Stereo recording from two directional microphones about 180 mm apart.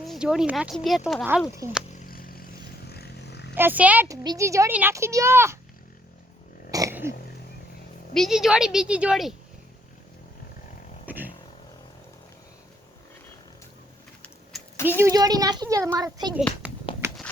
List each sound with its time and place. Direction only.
0.0 s speech: centre (ahead or behind)
2.0 s a sound: 55° left (ahead or behind)
2.8 s vehicle: 60° left (ahead or behind)
3.5 s a child's voice: 10° right (ahead or behind)
6.7 s throat clearing: 20° right (ahead or behind)
8.1 s speech: centre (ahead or behind)
11.0 s vehicle: 10° right (ahead or behind)
14.5 s a sound: centre (ahead or behind)
14.8 s speech: 15° right (ahead or behind)
16.6 s a sound: 10° right (ahead or behind)